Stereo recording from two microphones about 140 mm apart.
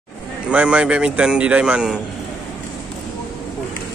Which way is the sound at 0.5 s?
10° right (ahead or behind).